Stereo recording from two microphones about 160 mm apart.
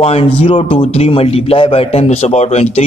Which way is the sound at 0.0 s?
40° left (ahead or behind).